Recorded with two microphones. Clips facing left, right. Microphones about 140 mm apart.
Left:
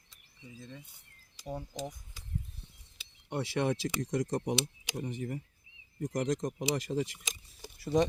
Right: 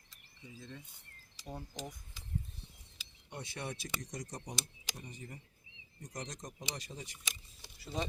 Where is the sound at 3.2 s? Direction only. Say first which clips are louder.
Left 12 dB; 90° left.